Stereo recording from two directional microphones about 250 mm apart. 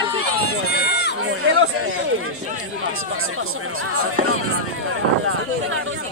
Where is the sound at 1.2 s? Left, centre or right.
Right.